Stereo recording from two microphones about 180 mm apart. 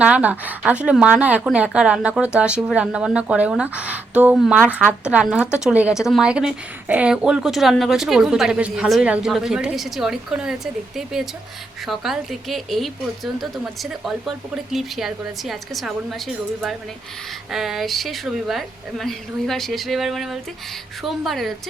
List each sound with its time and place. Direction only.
0.0 s a woman's voice: 5° right (ahead or behind)
17.5 s a woman's voice: centre (ahead or behind)